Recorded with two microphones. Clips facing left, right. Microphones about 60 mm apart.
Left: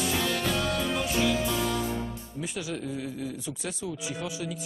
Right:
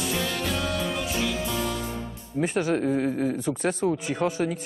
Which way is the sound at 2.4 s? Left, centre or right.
Right.